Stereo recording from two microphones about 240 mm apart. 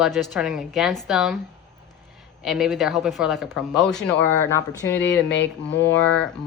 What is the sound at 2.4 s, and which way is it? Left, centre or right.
A woman's voice, centre.